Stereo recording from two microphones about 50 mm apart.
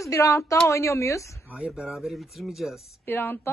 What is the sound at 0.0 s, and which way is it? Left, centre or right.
Speech, left.